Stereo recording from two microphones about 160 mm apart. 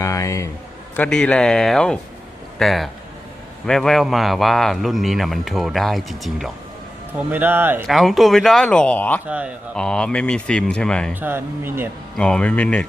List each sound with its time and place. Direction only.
0.0 s speech: 20° left (ahead or behind)
0.9 s a man's voice: 5° left (ahead or behind)
7.2 s speech: 10° right (ahead or behind)
7.9 s a man's voice: centre (ahead or behind)
9.2 s speech: 10° right (ahead or behind)
9.7 s a man's voice: 5° left (ahead or behind)
11.1 s speech: 15° right (ahead or behind)
12.1 s speech: 5° left (ahead or behind)